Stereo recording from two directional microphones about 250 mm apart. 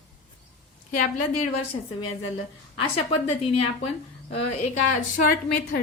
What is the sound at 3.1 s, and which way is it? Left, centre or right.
A woman's voice, left.